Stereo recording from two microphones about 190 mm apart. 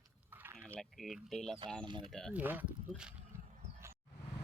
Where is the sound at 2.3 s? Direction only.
10° right (ahead or behind).